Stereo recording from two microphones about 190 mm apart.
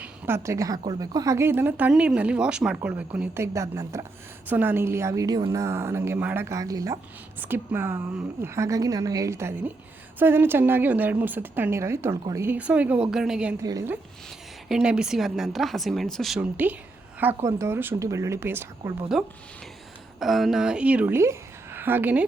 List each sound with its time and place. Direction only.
0.0 s speech: 15° right (ahead or behind)
13.6 s speech: 15° right (ahead or behind)
14.7 s speech: 5° right (ahead or behind)